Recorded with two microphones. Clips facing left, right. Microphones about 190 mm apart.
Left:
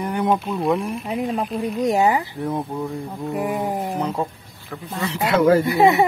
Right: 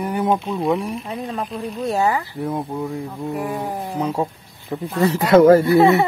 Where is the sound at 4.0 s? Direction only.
15° right (ahead or behind).